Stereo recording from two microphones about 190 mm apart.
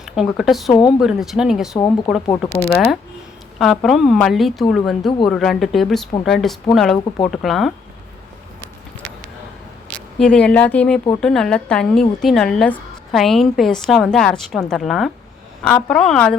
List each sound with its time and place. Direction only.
0.0 s speech: centre (ahead or behind)
0.7 s speech: 25° left (ahead or behind)
0.9 s a woman's voice: centre (ahead or behind)
2.4 s speech: 10° left (ahead or behind)
3.6 s a woman's voice: centre (ahead or behind)
9.9 s a woman's voice: 5° left (ahead or behind)